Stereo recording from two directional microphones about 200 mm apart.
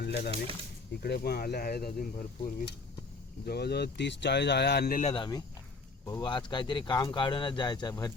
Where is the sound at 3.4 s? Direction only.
55° left (ahead or behind).